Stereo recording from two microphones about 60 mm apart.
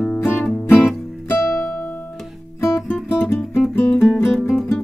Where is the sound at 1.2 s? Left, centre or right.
Left.